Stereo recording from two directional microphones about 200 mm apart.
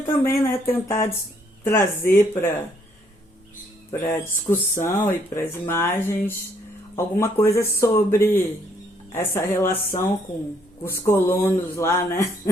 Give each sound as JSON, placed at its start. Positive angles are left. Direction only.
{"t": 0.2, "sound": "speech", "side_deg": 10}
{"t": 4.2, "sound": "speech", "side_deg": 10}